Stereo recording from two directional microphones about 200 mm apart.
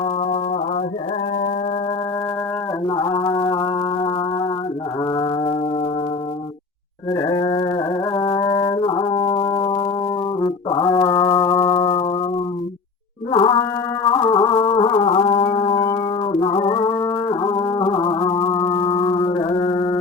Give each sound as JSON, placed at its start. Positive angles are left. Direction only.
{"t": 2.8, "sound": "music", "side_deg": 20}
{"t": 5.1, "sound": "music", "side_deg": 20}
{"t": 7.1, "sound": "a sound", "side_deg": 15}
{"t": 8.1, "sound": "music", "side_deg": 20}
{"t": 13.3, "sound": "mantra", "side_deg": 25}
{"t": 14.1, "sound": "music", "side_deg": 25}